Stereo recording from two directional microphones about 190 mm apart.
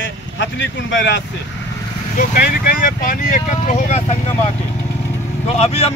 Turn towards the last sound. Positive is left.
turn(degrees=35)  # may be behind; listen again after turning